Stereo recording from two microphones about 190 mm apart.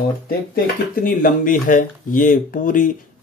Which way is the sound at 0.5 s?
50° left (ahead or behind).